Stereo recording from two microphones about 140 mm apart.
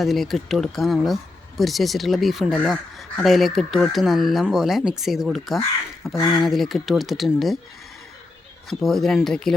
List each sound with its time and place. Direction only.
0.0 s speech: centre (ahead or behind)
6.1 s speech: 30° left (ahead or behind)
6.4 s speech: centre (ahead or behind)
8.8 s speech: centre (ahead or behind)